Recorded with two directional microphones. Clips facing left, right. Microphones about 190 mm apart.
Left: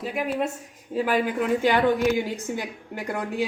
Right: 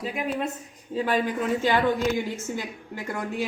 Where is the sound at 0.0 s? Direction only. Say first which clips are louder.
Left 2 dB; 5° left (ahead or behind).